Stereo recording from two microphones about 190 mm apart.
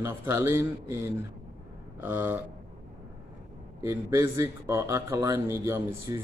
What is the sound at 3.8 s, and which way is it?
Speech, 15° right (ahead or behind).